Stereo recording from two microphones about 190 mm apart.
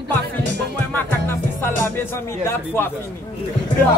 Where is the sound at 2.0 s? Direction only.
10° left (ahead or behind).